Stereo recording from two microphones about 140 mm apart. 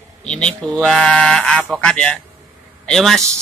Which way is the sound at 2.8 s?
Centre (ahead or behind).